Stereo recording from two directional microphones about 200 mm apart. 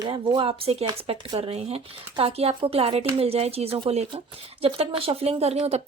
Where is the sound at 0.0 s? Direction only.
25° right (ahead or behind).